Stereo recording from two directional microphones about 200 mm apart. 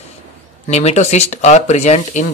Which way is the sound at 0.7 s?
35° left (ahead or behind).